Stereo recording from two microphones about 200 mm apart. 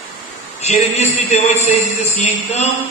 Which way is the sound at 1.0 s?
35° left (ahead or behind).